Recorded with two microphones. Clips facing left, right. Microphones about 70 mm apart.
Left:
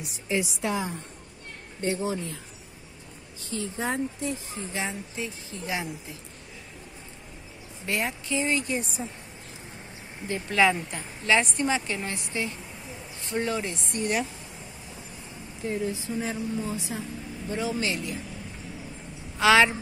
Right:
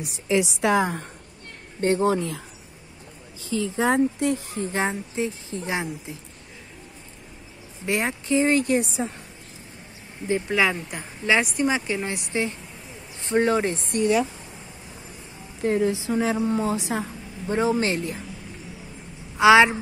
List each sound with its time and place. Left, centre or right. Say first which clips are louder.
0.3 s a woman's voice: right 7 dB; right
3.6 s a woman's voice: right 9 dB; right
4.6 s speech: right 7 dB; right
5.1 s speech: right 7 dB; right
7.8 s speech: right 4 dB; right
8.5 s a woman's voice: right 6 dB; right
8.7 s a woman's voice: right 8 dB; right
10.5 s a woman's voice: left 4 dB; centre
12.3 s speech: right 5 dB; right
15.6 s a woman's voice: right 8 dB; right
17.5 s speech: right 7 dB; right
19.3 s a woman's voice: right 5 dB; centre